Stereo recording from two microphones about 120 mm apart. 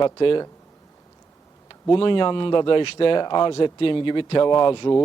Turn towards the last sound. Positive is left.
turn(degrees=40)  # may be behind; listen again after turning